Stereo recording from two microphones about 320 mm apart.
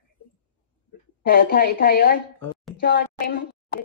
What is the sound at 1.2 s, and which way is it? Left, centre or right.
A woman's voice, left.